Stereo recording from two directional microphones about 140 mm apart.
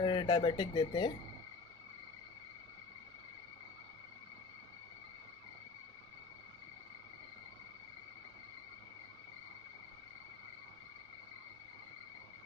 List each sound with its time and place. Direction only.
0.0 s speech: 35° left (ahead or behind)